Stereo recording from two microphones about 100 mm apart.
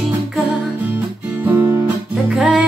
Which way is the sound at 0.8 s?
15° right (ahead or behind).